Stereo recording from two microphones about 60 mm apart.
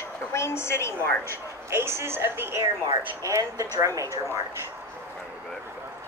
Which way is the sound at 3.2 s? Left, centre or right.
Right.